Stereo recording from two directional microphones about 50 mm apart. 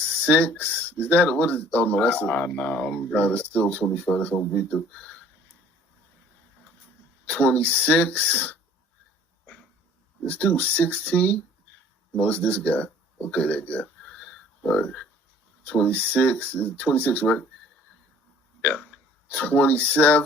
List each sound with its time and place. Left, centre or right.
0.0 s speech: left
7.3 s speech: left
10.2 s speech: left
14.0 s a sound: centre
14.6 s speech: left
18.6 s speech: left